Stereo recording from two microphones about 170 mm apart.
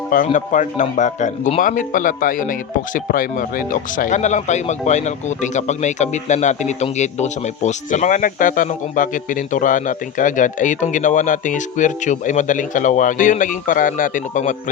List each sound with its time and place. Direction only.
0.3 s speech: 45° left (ahead or behind)